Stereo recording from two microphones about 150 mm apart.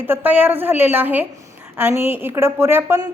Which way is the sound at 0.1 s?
10° right (ahead or behind).